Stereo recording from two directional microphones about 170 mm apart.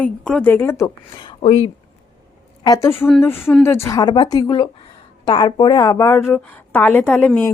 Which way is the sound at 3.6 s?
15° left (ahead or behind).